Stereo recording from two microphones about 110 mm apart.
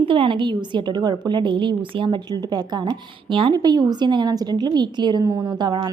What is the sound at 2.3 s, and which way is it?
A woman's voice, 35° right (ahead or behind).